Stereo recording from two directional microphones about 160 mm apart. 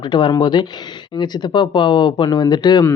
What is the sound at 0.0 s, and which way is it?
Speech, 30° left (ahead or behind).